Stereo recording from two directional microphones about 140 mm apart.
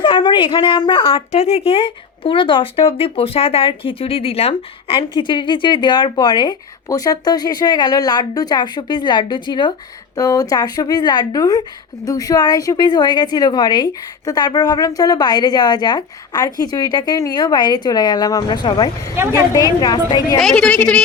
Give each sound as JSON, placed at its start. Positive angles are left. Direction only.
{"t": 0.0, "sound": "a woman's voice", "side_deg": 35}
{"t": 1.3, "sound": "a woman's voice", "side_deg": 50}
{"t": 20.4, "sound": "a woman's voice", "side_deg": 5}